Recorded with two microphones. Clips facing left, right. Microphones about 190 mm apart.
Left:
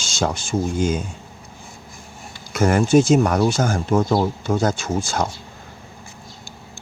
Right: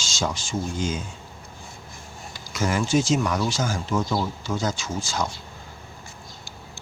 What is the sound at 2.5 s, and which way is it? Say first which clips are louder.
Speech: left 7 dB; 55° left (ahead or behind).